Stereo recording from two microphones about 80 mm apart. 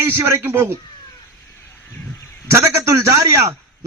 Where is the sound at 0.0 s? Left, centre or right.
Right.